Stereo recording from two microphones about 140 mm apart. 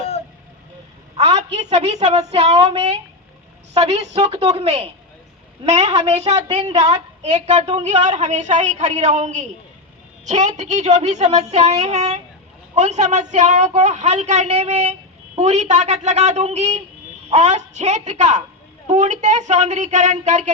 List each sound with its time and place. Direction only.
1.1 s a woman's voice: 50° right (ahead or behind)